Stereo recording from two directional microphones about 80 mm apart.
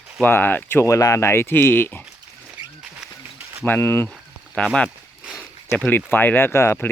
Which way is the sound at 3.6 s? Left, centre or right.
Left.